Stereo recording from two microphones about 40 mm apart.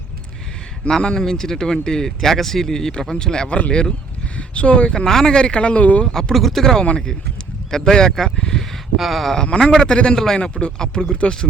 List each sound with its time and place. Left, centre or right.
0.9 s speech: centre
4.4 s a sound: left
4.9 s speech: centre; by 6.1 s left
6.1 s speech: centre
6.3 s speech: centre
8.4 s a sound: centre
9.0 s speech: centre
9.3 s speech: centre
10.2 s speech: centre
10.4 s speech: left